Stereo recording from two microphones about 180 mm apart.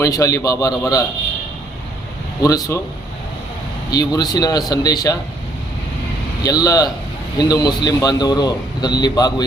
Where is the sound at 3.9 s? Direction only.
20° left (ahead or behind).